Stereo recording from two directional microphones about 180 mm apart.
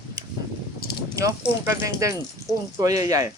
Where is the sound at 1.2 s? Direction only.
15° right (ahead or behind).